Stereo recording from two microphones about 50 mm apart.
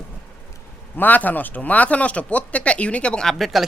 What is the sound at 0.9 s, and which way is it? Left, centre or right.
Speech, left.